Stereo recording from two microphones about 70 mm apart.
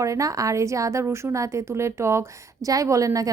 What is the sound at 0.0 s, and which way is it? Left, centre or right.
A woman's voice, right.